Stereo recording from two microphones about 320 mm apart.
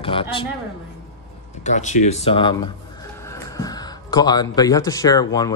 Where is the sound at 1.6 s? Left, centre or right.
Left.